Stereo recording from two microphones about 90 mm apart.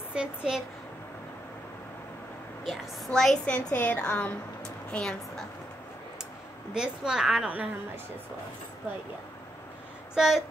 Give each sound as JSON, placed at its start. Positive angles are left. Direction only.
{"t": 0.1, "sound": "a woman's voice", "side_deg": -10}
{"t": 3.1, "sound": "a woman's voice", "side_deg": 10}
{"t": 6.7, "sound": "a woman's voice", "side_deg": -10}
{"t": 10.1, "sound": "speech", "side_deg": -5}